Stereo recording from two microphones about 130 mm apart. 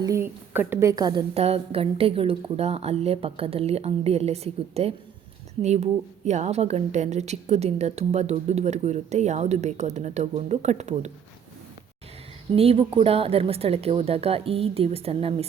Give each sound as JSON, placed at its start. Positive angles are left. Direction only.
{"t": 0.0, "sound": "a woman's voice", "side_deg": -25}
{"t": 0.5, "sound": "a woman's voice", "side_deg": -15}
{"t": 1.3, "sound": "a woman's voice", "side_deg": -50}
{"t": 12.5, "sound": "a woman's voice", "side_deg": -50}